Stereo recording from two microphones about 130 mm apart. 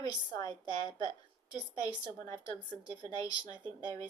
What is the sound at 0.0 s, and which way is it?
A woman's voice, 30° left (ahead or behind).